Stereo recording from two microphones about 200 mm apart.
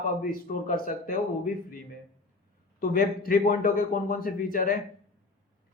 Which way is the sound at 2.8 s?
45° left (ahead or behind).